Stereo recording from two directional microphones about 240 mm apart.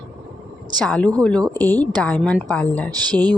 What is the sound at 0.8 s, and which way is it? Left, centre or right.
A woman's voice, centre.